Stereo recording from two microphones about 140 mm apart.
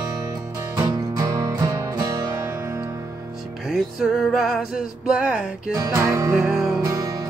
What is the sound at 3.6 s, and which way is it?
Music, 5° right (ahead or behind).